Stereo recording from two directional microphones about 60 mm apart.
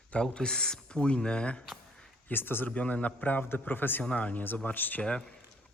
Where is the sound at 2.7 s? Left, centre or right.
Left.